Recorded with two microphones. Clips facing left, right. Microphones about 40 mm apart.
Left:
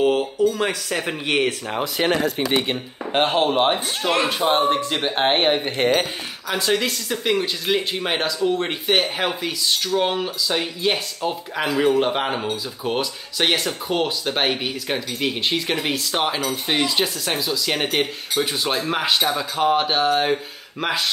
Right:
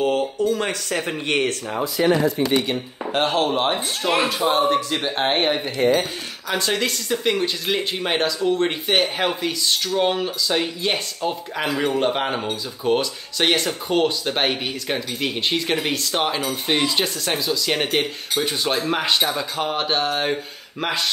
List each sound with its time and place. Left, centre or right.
0.0 s speech: centre
1.8 s speech: left
2.5 s a man's voice: left; by 4.2 s centre
4.5 s a man's voice: left
5.8 s speech: left
6.5 s speech: centre